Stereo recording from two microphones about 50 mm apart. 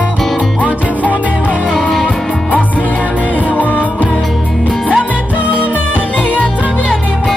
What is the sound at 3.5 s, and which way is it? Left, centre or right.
Music, left.